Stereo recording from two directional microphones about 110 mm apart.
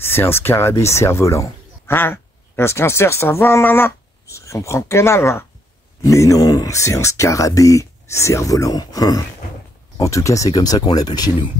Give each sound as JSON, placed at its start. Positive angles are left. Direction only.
{"t": 0.0, "sound": "speech", "side_deg": 20}